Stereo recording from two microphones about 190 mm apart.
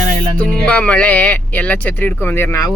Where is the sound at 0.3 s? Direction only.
5° left (ahead or behind).